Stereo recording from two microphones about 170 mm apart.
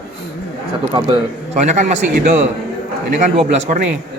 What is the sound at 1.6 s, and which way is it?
Speech, 45° right (ahead or behind).